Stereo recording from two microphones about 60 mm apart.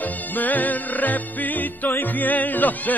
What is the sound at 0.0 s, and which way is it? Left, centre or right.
Music, left.